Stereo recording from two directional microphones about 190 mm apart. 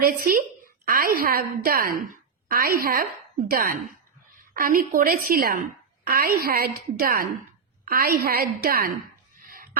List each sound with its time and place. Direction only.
0.0 s a woman's voice: 45° right (ahead or behind)